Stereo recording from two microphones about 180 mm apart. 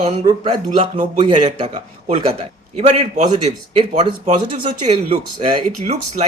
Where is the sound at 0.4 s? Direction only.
30° right (ahead or behind).